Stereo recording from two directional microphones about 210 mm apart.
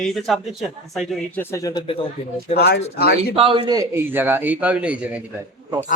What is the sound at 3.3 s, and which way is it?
A man's voice, 25° right (ahead or behind).